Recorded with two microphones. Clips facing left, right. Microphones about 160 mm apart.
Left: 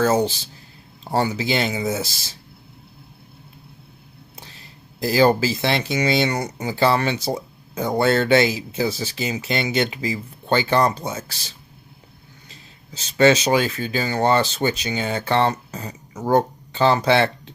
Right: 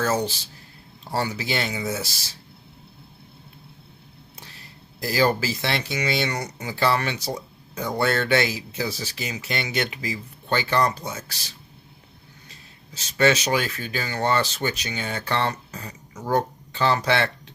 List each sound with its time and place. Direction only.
0.0 s speech: 25° left (ahead or behind)
4.9 s speech: 25° left (ahead or behind)
13.1 s speech: 25° left (ahead or behind)